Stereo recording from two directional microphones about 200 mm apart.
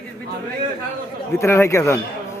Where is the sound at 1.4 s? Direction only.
15° left (ahead or behind).